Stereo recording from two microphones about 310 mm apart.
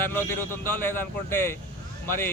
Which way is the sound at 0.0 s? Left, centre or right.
Centre.